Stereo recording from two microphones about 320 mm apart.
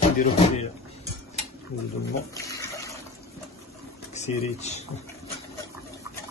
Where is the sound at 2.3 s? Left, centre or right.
Centre.